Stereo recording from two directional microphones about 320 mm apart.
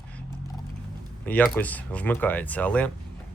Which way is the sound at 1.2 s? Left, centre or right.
Centre.